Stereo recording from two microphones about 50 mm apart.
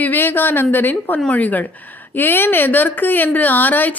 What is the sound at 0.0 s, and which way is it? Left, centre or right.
Speech, left.